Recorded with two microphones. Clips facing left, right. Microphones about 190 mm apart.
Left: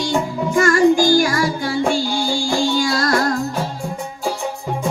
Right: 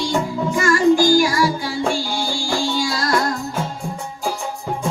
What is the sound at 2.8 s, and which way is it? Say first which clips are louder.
Music: left 2 dB; 55° left (ahead or behind).